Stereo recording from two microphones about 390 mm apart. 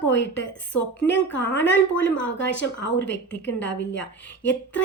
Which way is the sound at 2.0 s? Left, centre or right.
Left.